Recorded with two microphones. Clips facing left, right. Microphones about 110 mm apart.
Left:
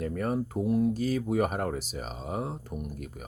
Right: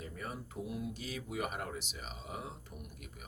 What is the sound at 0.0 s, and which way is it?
Speech, 55° left (ahead or behind).